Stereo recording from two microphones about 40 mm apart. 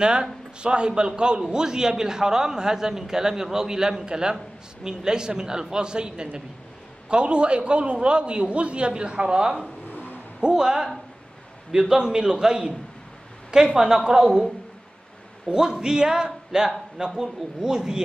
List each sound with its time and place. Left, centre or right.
0.0 s a man's voice: right
9.8 s vehicle: left
10.4 s a man's voice: centre
15.4 s a man's voice: centre